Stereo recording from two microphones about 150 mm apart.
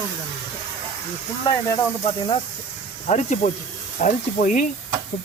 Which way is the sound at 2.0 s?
35° left (ahead or behind).